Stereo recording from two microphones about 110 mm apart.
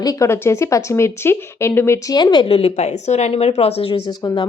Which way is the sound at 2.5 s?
80° left.